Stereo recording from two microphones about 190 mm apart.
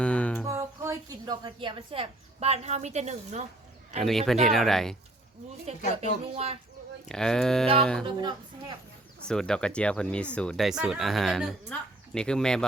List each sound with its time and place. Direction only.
0.0 s music: 5° left (ahead or behind)
0.4 s a woman's voice: 15° right (ahead or behind); by 3.4 s 35° right (ahead or behind)
4.0 s speech: centre (ahead or behind)
5.7 s speech: 35° right (ahead or behind)
7.1 s speech: 5° left (ahead or behind)
8.0 s speech: 25° right (ahead or behind)
9.2 s speech: 5° left (ahead or behind)